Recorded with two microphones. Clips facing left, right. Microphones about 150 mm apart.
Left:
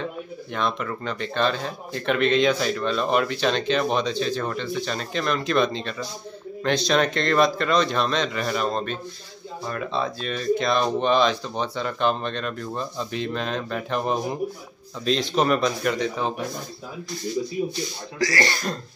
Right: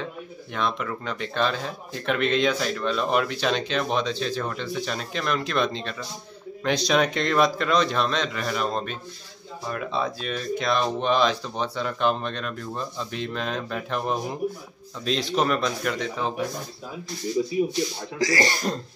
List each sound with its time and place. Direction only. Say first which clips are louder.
0.5 s speech: left 1 dB; centre (ahead or behind)
18.2 s speech: right 1 dB; 20° right (ahead or behind)